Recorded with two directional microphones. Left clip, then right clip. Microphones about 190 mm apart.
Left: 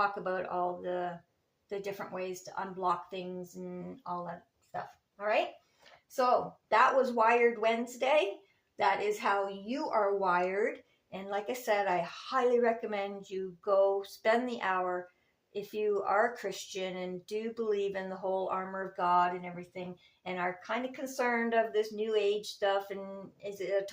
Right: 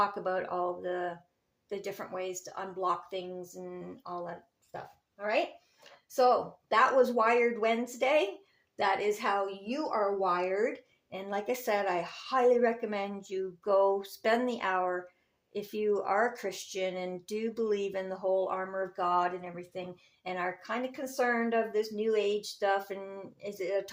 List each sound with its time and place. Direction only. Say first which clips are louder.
0.0 s a woman's voice: right 2 dB; 35° right (ahead or behind)
6.7 s a woman's voice: right 1 dB; 40° right (ahead or behind)